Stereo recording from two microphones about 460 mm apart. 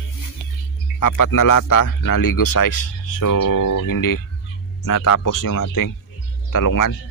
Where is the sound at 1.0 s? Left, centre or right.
Left.